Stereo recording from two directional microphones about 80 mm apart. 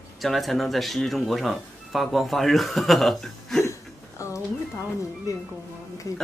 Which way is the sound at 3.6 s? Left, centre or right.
Left.